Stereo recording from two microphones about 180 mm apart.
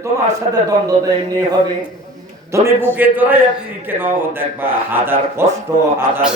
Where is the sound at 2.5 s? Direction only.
15° right (ahead or behind).